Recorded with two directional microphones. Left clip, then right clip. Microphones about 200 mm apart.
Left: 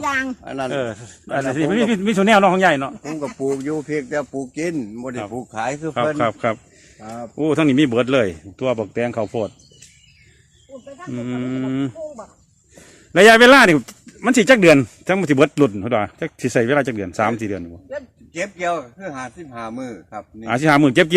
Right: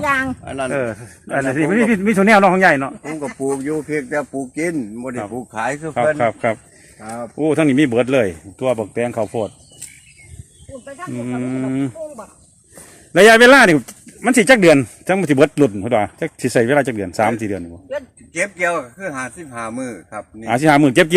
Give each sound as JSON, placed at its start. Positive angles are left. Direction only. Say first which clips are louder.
{"t": 0.0, "sound": "speech", "louder": "right 3 dB", "side_deg": 55}
{"t": 0.7, "sound": "a man's voice", "louder": "right 3 dB", "side_deg": -10}
{"t": 3.2, "sound": "speech", "louder": "right 1 dB", "side_deg": 20}
{"t": 5.3, "sound": "speech", "louder": "right 1 dB", "side_deg": 30}
{"t": 5.5, "sound": "speech", "louder": "right 2 dB", "side_deg": 40}
{"t": 6.1, "sound": "speech", "louder": "right 2 dB", "side_deg": 10}
{"t": 11.1, "sound": "speech", "louder": "right 1 dB", "side_deg": 0}
{"t": 13.1, "sound": "speech", "louder": "right 1 dB", "side_deg": 5}
{"t": 17.8, "sound": "a man's voice", "louder": "right 4 dB", "side_deg": -30}
{"t": 20.4, "sound": "speech", "louder": "right 2 dB", "side_deg": 0}